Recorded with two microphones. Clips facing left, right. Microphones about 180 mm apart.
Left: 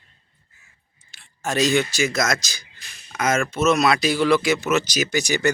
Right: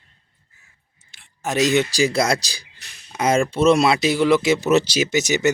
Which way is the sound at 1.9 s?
35° right (ahead or behind).